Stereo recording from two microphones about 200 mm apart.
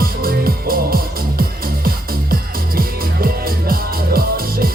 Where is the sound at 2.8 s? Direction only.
45° right (ahead or behind).